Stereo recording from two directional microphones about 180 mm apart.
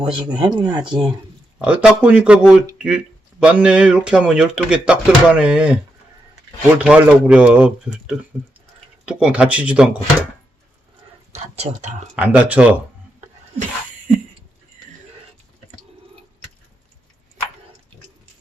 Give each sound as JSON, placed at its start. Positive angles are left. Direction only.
{"t": 0.0, "sound": "speech", "side_deg": -25}
{"t": 1.5, "sound": "speech", "side_deg": -5}
{"t": 11.3, "sound": "speech", "side_deg": -35}
{"t": 12.1, "sound": "speech", "side_deg": -5}